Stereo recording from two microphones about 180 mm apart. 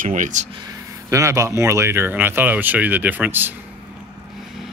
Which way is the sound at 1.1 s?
15° right (ahead or behind).